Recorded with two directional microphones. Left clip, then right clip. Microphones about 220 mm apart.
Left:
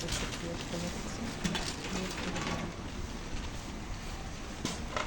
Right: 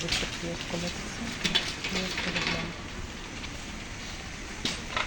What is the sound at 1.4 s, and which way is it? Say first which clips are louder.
Mechanisms: right 10 dB; 60° left (ahead or behind).